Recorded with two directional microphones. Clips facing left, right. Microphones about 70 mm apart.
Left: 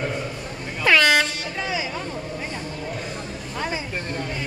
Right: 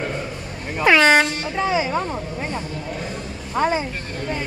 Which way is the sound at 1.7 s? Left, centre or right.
Right.